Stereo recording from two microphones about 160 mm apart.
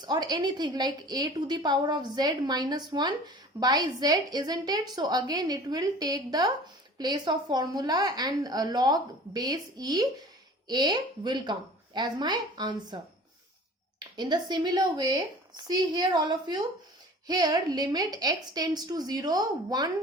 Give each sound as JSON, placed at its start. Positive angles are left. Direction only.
{"t": 0.0, "sound": "a woman's voice", "side_deg": -25}
{"t": 14.2, "sound": "a woman's voice", "side_deg": -25}